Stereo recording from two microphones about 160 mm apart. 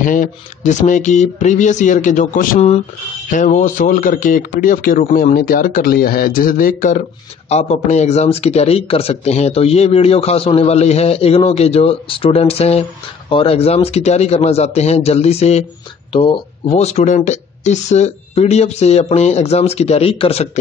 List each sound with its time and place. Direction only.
0.0 s speech: 55° left (ahead or behind)
7.4 s speech: 45° left (ahead or behind)